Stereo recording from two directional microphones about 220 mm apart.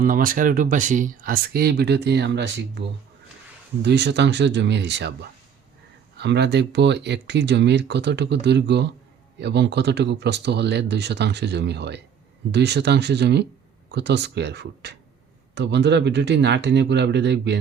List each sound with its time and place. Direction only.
0.0 s speech: 40° right (ahead or behind)
3.8 s speech: 50° right (ahead or behind)